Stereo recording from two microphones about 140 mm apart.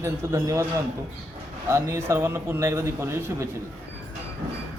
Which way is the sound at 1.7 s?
20° right (ahead or behind).